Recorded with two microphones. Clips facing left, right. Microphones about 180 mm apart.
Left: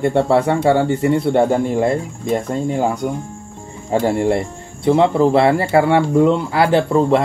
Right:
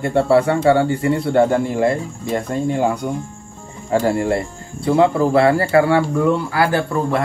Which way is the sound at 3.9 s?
20° left (ahead or behind).